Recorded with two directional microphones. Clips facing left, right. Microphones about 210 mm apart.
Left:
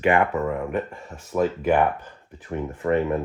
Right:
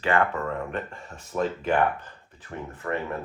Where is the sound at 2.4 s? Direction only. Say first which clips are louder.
Left 8 dB; 20° left (ahead or behind).